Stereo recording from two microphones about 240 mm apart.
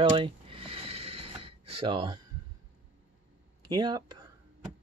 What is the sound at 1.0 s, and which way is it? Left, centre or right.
Snort, right.